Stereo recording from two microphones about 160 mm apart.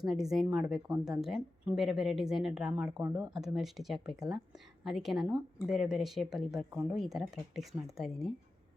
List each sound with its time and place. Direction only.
0.0 s speech: centre (ahead or behind)